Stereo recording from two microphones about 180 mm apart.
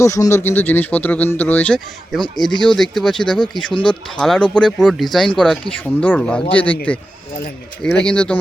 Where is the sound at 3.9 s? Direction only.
5° left (ahead or behind).